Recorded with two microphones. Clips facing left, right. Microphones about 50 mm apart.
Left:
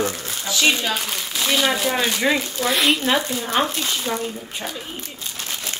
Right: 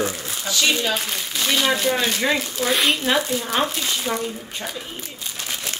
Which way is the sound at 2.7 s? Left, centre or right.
Centre.